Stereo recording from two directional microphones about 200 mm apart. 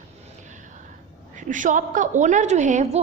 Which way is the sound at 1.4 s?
40° right (ahead or behind).